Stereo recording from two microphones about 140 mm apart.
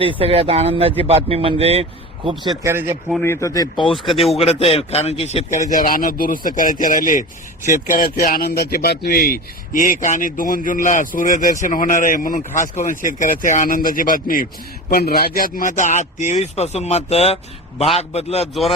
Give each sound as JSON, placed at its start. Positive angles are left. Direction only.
{"t": 0.0, "sound": "speech", "side_deg": -40}
{"t": 2.6, "sound": "speech", "side_deg": -15}
{"t": 3.2, "sound": "speech", "side_deg": 25}
{"t": 3.9, "sound": "speech", "side_deg": 0}
{"t": 4.4, "sound": "a man's voice", "side_deg": 45}
{"t": 5.7, "sound": "a man's voice", "side_deg": 85}
{"t": 7.7, "sound": "a man's voice", "side_deg": 85}
{"t": 10.0, "sound": "a man's voice", "side_deg": 70}